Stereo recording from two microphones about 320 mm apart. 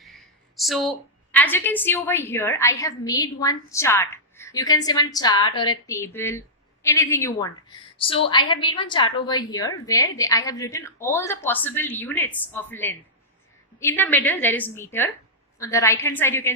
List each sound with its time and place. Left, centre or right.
0.0 s a woman's voice: centre